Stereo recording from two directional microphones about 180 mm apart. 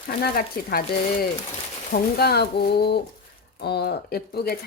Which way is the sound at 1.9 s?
60° left (ahead or behind).